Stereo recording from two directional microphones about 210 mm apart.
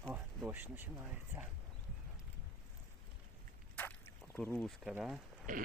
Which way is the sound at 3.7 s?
10° left (ahead or behind).